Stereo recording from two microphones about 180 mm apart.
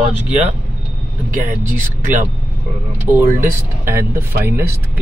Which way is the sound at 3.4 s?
15° right (ahead or behind).